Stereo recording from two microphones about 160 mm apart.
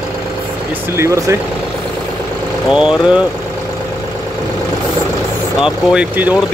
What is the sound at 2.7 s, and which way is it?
Speech, 5° right (ahead or behind).